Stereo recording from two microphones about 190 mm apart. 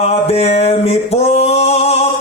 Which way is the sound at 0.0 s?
35° left (ahead or behind).